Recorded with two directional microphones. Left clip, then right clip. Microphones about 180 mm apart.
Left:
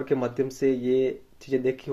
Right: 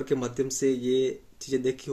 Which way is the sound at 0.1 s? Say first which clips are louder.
Left 3 dB; 15° right (ahead or behind).